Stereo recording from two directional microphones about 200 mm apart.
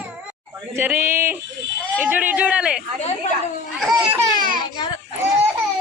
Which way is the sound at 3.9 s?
10° right (ahead or behind).